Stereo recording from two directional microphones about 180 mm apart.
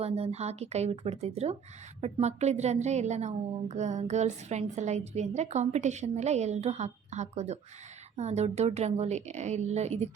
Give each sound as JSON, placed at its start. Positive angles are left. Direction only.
{"t": 0.0, "sound": "a woman's voice", "side_deg": -35}